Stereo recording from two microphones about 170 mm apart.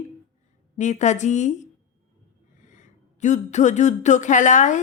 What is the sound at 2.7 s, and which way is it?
Speech, 45° left (ahead or behind).